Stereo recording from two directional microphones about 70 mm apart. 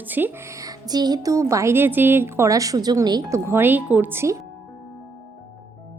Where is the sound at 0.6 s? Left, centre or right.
Right.